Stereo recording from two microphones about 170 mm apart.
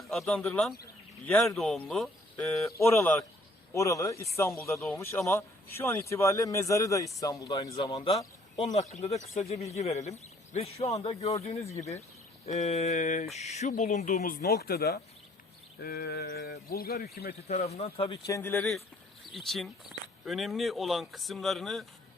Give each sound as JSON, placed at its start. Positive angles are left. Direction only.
{"t": 0.0, "sound": "a sound", "side_deg": 0}
{"t": 1.2, "sound": "speech", "side_deg": 5}
{"t": 2.6, "sound": "speech", "side_deg": 15}
{"t": 7.8, "sound": "a man's voice", "side_deg": 35}
{"t": 14.4, "sound": "speech", "side_deg": 65}
{"t": 17.5, "sound": "a man's voice", "side_deg": 40}
{"t": 18.3, "sound": "speech", "side_deg": 15}
{"t": 19.2, "sound": "speech", "side_deg": 0}